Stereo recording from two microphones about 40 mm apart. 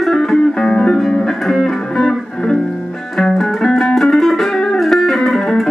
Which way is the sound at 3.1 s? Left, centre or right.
Centre.